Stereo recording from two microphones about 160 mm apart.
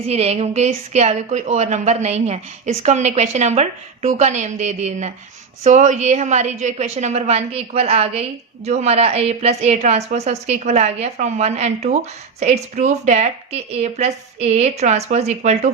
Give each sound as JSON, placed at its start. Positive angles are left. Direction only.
{"t": 0.1, "sound": "a woman's voice", "side_deg": -40}